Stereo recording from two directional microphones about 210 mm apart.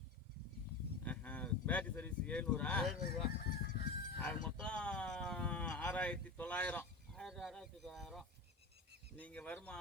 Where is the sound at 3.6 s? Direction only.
40° left (ahead or behind).